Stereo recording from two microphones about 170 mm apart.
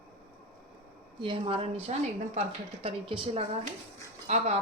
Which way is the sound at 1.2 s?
30° right (ahead or behind).